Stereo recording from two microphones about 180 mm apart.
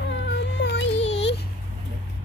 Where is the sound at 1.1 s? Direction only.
75° left (ahead or behind).